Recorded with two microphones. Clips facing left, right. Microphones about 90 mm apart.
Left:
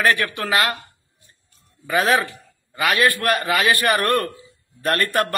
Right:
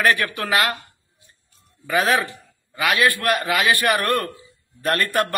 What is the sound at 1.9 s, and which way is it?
A man's voice, centre (ahead or behind).